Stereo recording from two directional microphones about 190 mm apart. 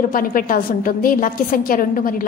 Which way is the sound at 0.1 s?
45° left (ahead or behind).